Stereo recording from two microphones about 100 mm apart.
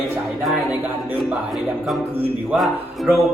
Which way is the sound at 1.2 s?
Centre (ahead or behind).